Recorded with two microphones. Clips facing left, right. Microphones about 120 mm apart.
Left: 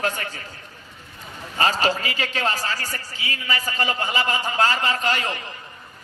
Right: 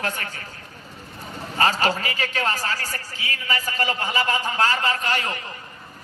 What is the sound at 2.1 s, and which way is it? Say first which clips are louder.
Speech: even; 25° left (ahead or behind).